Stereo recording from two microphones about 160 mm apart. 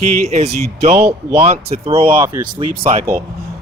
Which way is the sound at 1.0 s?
15° right (ahead or behind).